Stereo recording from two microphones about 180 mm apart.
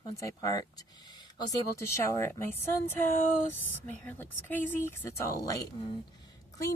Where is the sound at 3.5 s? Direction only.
10° left (ahead or behind).